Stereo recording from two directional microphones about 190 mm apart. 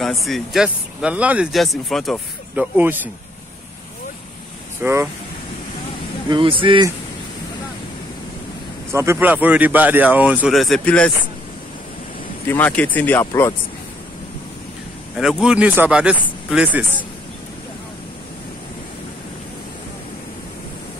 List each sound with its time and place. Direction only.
0.0 s speech: centre (ahead or behind)
4.8 s speech: 10° right (ahead or behind)
6.2 s speech: 25° right (ahead or behind)
8.9 s speech: 15° right (ahead or behind); by 11.1 s 5° left (ahead or behind)
12.4 s speech: 10° left (ahead or behind)
15.1 s speech: centre (ahead or behind)